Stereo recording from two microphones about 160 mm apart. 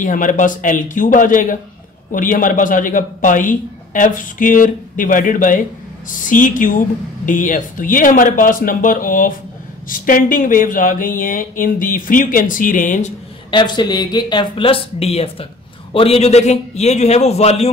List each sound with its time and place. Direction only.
0.0 s speech: 55° left (ahead or behind)
13.5 s a man's voice: 30° left (ahead or behind)